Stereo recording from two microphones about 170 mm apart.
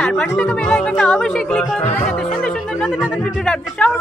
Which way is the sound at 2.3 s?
5° left (ahead or behind).